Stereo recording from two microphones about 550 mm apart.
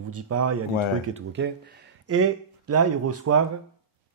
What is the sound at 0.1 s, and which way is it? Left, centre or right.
Speech, right.